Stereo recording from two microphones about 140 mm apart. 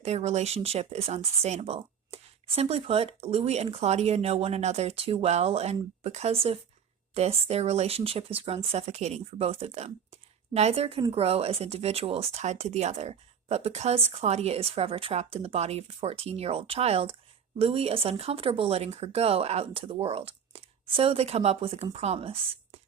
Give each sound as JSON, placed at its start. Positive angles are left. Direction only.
{"t": 0.0, "sound": "speech", "side_deg": -50}